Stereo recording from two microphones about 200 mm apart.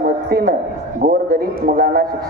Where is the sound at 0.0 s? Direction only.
50° right (ahead or behind).